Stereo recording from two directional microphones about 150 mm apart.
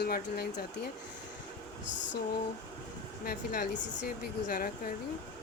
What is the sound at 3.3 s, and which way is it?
Speech, 65° left (ahead or behind).